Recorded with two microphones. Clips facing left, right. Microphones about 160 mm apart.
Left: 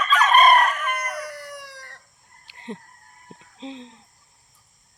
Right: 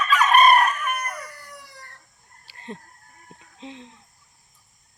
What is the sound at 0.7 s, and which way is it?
Chicken, 90° left.